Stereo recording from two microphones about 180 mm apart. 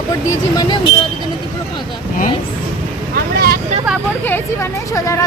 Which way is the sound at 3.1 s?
60° right (ahead or behind).